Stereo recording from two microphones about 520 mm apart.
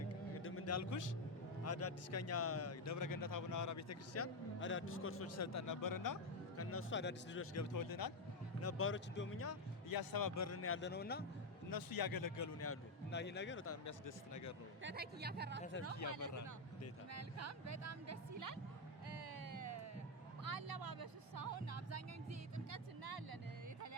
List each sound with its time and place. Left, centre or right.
0.3 s a sound: left
1.6 s a man's voice: left
6.6 s a man's voice: left
8.6 s a man's voice: left
9.9 s a man's voice: left; by 11.3 s centre
11.7 s a man's voice: left
14.8 s speech: centre
16.0 s speech: right
16.3 s speech: left
17.1 s speech: right
19.0 s music: right